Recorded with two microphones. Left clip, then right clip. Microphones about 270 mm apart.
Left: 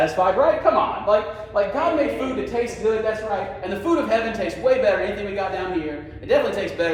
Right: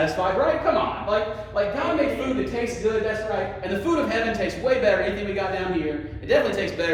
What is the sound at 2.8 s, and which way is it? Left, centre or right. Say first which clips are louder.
A man's voice: left 2 dB; centre.